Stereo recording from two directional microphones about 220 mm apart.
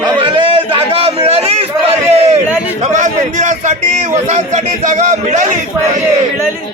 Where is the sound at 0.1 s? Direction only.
20° right (ahead or behind).